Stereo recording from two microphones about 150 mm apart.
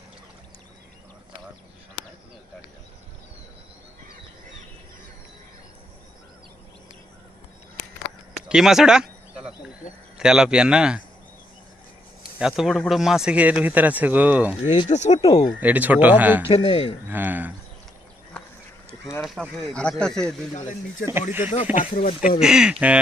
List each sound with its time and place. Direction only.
8.4 s a sound: 5° right (ahead or behind)
10.2 s speech: 5° right (ahead or behind)
12.4 s speech: 5° right (ahead or behind)
14.8 s speech: 50° left (ahead or behind)
15.6 s speech: 10° right (ahead or behind)
16.5 s speech: 35° left (ahead or behind)
17.1 s speech: 10° right (ahead or behind)
19.2 s speech: centre (ahead or behind)
20.5 s speech: 60° left (ahead or behind)
21.1 s speech: 15° right (ahead or behind)
21.5 s speech: 50° left (ahead or behind)
21.9 s speech: 65° left (ahead or behind)
22.4 s speech: 5° right (ahead or behind)